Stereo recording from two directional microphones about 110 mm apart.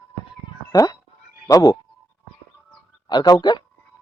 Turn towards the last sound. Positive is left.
turn(degrees=40)  # may be behind; listen again after turning